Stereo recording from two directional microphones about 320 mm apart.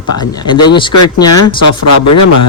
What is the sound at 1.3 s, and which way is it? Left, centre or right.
Speech, left.